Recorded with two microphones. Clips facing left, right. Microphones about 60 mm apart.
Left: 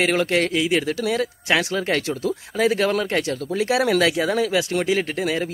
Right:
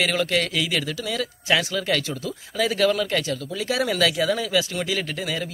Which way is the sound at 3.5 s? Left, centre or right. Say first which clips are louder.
Left 4 dB; left.